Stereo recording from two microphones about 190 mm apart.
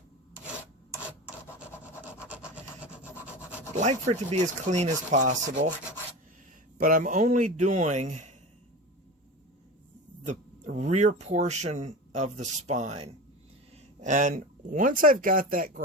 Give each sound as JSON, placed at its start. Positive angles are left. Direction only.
{"t": 1.5, "sound": "wood", "side_deg": -5}
{"t": 3.8, "sound": "speech", "side_deg": -40}
{"t": 6.7, "sound": "speech", "side_deg": -45}
{"t": 10.2, "sound": "speech", "side_deg": -40}